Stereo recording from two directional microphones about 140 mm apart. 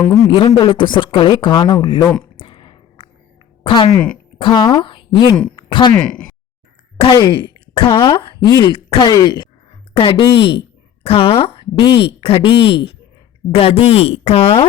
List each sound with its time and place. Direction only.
0.1 s speech: 25° left (ahead or behind)
2.4 s a sound: 35° left (ahead or behind)
3.6 s a woman's voice: 40° left (ahead or behind)
3.9 s speech: 10° left (ahead or behind)
4.4 s speech: 35° left (ahead or behind)
5.5 s a sound: 35° left (ahead or behind)
5.9 s speech: 10° left (ahead or behind)
7.1 s speech: 35° left (ahead or behind)
9.9 s speech: 40° left (ahead or behind)